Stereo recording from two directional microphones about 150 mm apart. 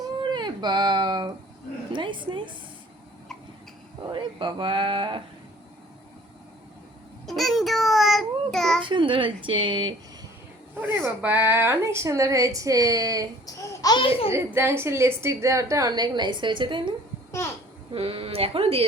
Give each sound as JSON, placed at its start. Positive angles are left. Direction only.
{"t": 0.0, "sound": "baby cry", "side_deg": -30}
{"t": 1.9, "sound": "speech", "side_deg": -35}
{"t": 4.1, "sound": "speech", "side_deg": -35}
{"t": 7.3, "sound": "child singing", "side_deg": 0}
{"t": 8.8, "sound": "speech", "side_deg": -35}
{"t": 10.8, "sound": "a woman's voice", "side_deg": -10}
{"t": 13.4, "sound": "babbling", "side_deg": 20}
{"t": 14.3, "sound": "a woman's voice", "side_deg": -15}
{"t": 17.9, "sound": "speech", "side_deg": -40}